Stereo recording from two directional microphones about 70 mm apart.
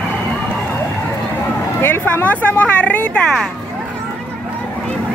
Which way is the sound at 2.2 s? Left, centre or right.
Centre.